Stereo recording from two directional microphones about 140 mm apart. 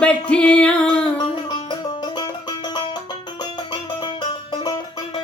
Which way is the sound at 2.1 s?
30° left (ahead or behind).